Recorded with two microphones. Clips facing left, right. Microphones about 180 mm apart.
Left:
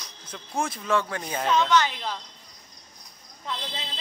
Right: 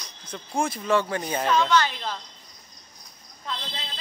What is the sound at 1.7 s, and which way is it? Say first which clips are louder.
Speech: even; 15° left (ahead or behind).